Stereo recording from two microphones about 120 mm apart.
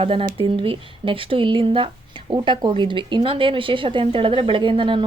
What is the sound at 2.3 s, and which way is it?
Speech, 35° right (ahead or behind).